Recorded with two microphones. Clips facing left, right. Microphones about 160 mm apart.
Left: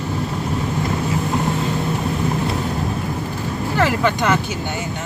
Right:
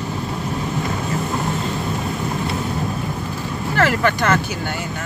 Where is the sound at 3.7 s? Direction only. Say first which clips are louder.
Right 1 dB; 15° left (ahead or behind).